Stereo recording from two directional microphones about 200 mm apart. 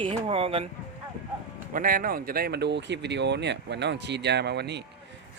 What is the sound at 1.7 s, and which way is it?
Speech, 45° right (ahead or behind).